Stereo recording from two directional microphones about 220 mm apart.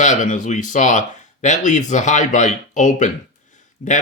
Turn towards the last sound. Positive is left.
turn(degrees=35)  # may be behind; listen again after turning